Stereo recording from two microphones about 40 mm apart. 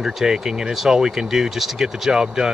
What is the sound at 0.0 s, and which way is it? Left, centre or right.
Speech, centre.